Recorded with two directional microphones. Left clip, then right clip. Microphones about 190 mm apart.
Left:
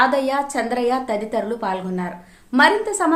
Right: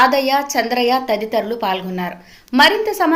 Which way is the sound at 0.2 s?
5° right (ahead or behind).